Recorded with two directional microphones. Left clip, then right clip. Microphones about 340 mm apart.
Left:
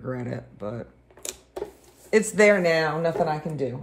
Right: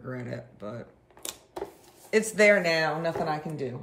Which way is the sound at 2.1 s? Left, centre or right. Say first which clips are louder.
Left 2 dB; centre.